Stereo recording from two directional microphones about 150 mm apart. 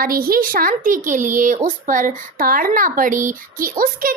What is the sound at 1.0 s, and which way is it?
Speech, 60° right (ahead or behind).